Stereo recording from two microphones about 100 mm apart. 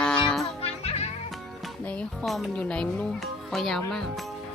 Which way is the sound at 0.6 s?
90° left.